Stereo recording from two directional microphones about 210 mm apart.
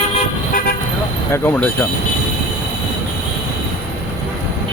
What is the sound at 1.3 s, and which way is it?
Speech, 10° left (ahead or behind).